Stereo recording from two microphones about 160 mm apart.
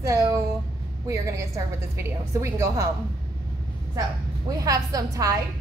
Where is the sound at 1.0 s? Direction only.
20° right (ahead or behind).